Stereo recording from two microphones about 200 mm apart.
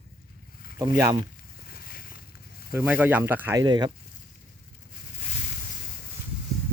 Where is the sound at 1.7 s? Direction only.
45° left (ahead or behind).